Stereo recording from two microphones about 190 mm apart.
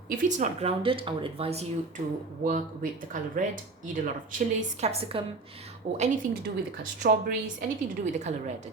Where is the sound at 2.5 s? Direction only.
45° right (ahead or behind).